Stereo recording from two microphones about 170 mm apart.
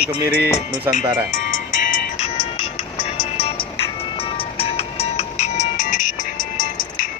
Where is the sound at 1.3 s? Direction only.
50° left (ahead or behind).